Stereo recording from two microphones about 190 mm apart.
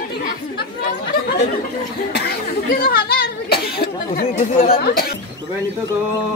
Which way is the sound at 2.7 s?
50° left (ahead or behind).